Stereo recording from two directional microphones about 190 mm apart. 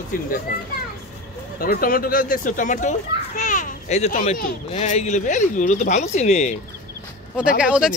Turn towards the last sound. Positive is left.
turn(degrees=-5)  # may be behind; listen again after turning